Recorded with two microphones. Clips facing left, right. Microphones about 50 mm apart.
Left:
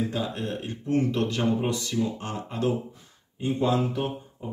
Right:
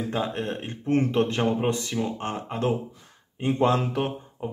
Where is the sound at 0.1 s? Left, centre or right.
Right.